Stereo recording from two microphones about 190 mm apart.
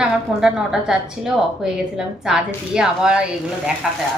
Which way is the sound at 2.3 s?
5° right (ahead or behind).